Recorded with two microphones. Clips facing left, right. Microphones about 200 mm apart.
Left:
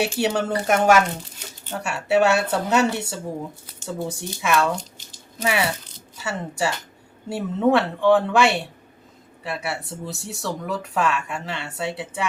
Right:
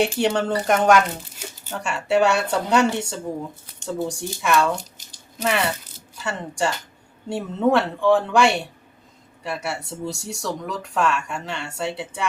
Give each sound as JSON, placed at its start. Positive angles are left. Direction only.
{"t": 0.0, "sound": "speech", "side_deg": 5}